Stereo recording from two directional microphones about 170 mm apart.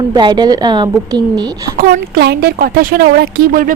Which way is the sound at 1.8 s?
60° right (ahead or behind).